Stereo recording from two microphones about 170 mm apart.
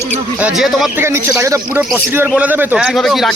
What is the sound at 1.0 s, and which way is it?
Speech, 15° right (ahead or behind).